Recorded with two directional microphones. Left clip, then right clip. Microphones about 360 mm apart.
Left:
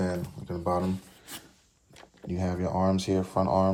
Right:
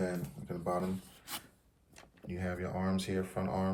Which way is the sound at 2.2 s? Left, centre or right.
Centre.